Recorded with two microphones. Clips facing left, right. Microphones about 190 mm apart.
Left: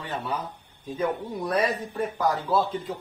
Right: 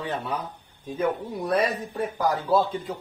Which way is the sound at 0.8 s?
10° right (ahead or behind).